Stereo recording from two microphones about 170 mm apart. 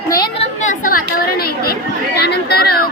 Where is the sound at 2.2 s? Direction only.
75° left (ahead or behind).